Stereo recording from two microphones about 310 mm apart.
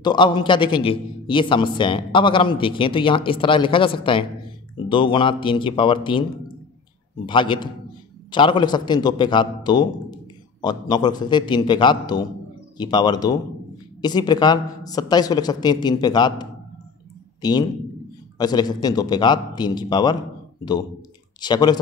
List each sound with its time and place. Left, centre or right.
0.0 s a man's voice: centre
21.4 s a man's voice: centre